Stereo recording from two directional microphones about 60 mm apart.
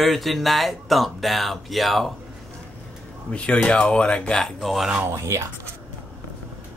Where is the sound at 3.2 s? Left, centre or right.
Centre.